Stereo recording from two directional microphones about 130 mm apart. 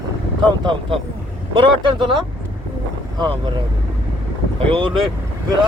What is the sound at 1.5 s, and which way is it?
Speech, 40° right (ahead or behind).